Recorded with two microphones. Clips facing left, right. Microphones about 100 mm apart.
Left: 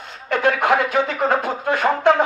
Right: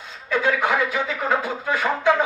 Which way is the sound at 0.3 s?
65° left (ahead or behind).